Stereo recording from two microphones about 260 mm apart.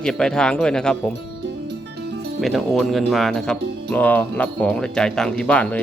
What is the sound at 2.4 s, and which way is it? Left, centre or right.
Speech, centre.